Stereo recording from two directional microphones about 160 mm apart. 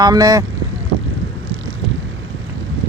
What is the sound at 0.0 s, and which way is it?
Speech, 25° right (ahead or behind).